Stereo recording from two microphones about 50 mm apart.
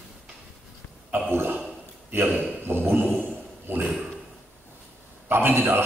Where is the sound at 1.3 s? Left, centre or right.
Right.